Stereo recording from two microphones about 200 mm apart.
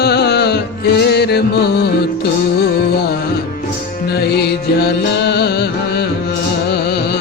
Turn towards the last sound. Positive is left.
turn(degrees=55)  # may be behind; listen again after turning